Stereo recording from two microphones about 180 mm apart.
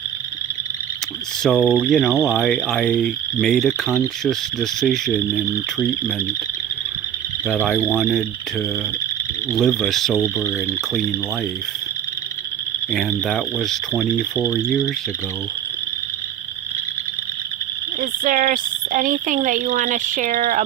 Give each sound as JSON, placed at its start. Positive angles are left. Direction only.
{"t": 1.5, "sound": "frog", "side_deg": 0}
{"t": 7.4, "sound": "frog", "side_deg": 0}
{"t": 9.6, "sound": "frog", "side_deg": 0}
{"t": 12.9, "sound": "frog", "side_deg": 0}
{"t": 14.3, "sound": "speech", "side_deg": -10}
{"t": 18.0, "sound": "speech", "side_deg": -50}